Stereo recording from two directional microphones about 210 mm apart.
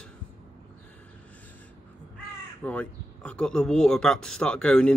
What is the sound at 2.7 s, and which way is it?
Speech, 5° left (ahead or behind).